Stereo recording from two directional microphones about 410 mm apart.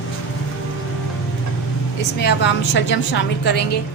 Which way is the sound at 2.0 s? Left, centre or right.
Left.